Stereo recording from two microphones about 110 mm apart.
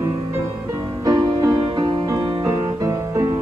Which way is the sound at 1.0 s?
40° right (ahead or behind).